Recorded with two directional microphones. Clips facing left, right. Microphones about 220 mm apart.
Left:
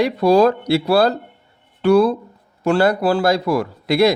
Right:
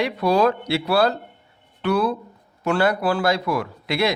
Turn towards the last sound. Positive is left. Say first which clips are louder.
# left 7 dB
turn(degrees=35)  # may be behind; listen again after turning